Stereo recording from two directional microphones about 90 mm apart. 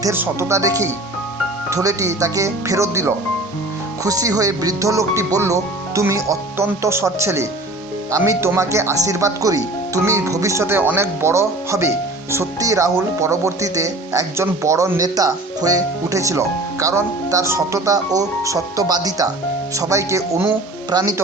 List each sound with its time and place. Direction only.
0.1 s speech: 30° right (ahead or behind)
1.7 s speech: 40° right (ahead or behind)